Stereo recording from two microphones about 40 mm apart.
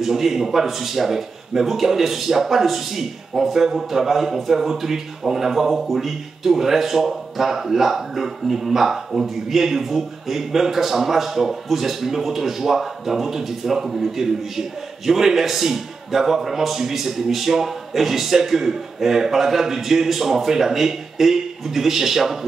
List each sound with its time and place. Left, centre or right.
0.0 s speech: centre